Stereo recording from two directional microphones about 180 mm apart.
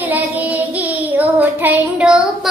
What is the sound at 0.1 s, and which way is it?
Child singing, 10° right (ahead or behind).